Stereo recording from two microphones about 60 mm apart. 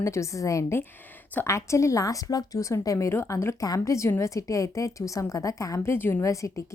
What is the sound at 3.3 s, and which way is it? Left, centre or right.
Speech, left.